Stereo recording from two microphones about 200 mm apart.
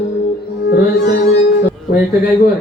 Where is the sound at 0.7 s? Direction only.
50° left (ahead or behind).